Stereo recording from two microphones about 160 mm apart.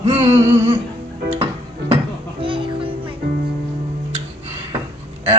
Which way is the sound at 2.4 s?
30° right (ahead or behind).